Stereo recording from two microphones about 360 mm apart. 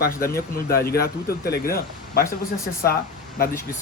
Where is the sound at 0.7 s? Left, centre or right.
Left.